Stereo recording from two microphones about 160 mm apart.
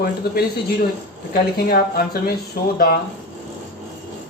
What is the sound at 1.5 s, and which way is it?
Speech, 70° left (ahead or behind).